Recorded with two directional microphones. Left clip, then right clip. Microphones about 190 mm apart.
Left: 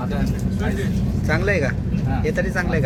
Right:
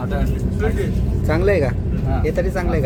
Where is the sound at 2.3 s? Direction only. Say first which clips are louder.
Right 1 dB; 5° right (ahead or behind).